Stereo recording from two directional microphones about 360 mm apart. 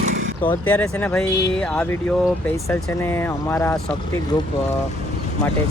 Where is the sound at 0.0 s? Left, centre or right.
Right.